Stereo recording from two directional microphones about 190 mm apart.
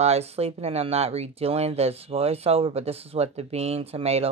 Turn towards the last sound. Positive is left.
turn(degrees=-30)  # may be behind; listen again after turning